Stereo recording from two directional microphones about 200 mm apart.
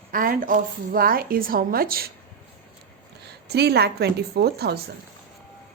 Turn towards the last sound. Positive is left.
turn(degrees=-55)  # may be behind; listen again after turning